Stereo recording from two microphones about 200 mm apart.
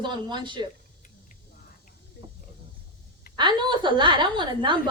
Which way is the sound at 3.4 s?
25° right (ahead or behind).